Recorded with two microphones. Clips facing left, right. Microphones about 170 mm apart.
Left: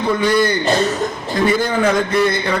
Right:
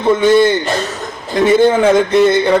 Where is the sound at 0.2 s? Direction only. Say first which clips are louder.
Right 6 dB; 25° right (ahead or behind).